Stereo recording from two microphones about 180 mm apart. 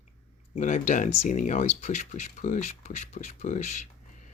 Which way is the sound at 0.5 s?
45° left (ahead or behind).